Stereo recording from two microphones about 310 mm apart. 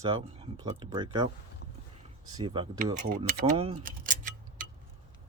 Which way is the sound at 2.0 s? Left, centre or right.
Centre.